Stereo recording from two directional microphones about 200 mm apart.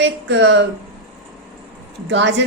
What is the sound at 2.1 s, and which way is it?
Speech, 60° right (ahead or behind).